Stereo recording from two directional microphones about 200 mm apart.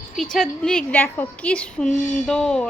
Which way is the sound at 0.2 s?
Centre (ahead or behind).